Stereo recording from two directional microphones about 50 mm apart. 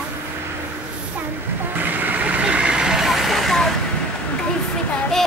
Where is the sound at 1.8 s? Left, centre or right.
Right; by 3.7 s centre.